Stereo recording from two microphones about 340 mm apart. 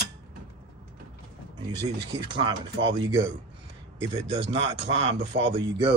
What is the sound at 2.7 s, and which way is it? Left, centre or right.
Speech, right.